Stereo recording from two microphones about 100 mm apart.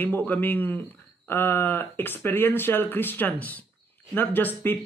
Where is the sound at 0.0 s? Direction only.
20° left (ahead or behind).